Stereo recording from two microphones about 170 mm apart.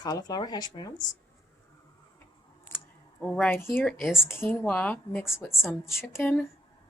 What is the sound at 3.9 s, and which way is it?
Speech, centre (ahead or behind).